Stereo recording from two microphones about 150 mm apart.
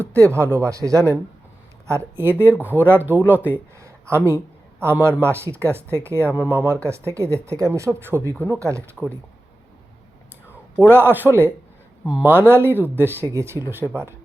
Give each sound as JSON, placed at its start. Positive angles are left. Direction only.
{"t": 0.3, "sound": "speech", "side_deg": -15}
{"t": 10.5, "sound": "a man's voice", "side_deg": -15}